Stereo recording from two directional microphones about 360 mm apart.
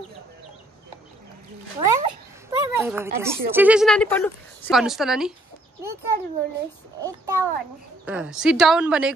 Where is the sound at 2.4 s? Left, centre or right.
Centre.